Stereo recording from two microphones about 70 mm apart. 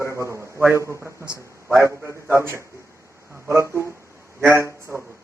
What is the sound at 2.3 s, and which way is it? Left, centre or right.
A man's voice, right.